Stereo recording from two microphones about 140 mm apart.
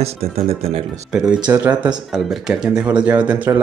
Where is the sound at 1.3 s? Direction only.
30° right (ahead or behind).